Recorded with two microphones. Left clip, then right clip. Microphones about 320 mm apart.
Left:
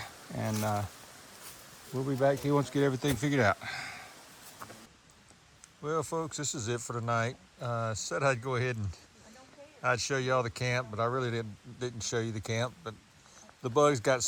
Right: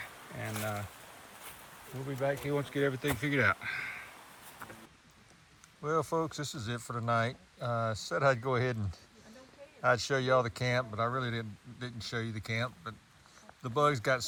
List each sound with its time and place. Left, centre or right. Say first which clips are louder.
0.3 s a sound: left 5 dB; left
2.2 s speech: left 5 dB; centre
5.8 s speech: right 1 dB; centre